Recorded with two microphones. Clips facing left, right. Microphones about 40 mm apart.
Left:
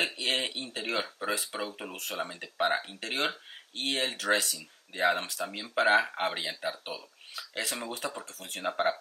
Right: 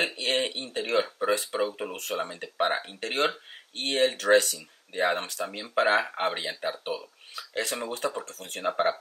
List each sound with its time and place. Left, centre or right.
0.0 s a sound: centre
0.7 s speech: centre
1.8 s speech: right
2.2 s speech: centre
6.6 s speech: right
7.3 s speech: centre